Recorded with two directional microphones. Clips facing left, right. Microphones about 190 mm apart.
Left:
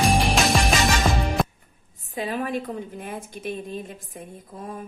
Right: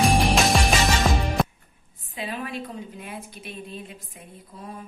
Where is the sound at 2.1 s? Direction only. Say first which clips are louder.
Left 5 dB; 45° left (ahead or behind).